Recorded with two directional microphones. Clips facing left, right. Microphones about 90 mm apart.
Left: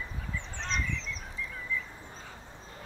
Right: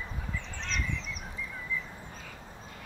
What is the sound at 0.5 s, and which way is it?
Fowl, 35° left (ahead or behind).